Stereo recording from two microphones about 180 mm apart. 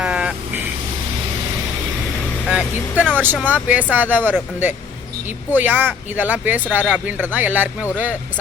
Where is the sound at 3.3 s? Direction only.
10° left (ahead or behind).